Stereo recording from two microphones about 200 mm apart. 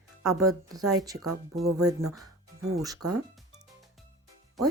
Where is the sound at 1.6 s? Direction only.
90° right.